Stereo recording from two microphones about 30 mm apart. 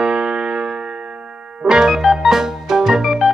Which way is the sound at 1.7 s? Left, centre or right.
Centre.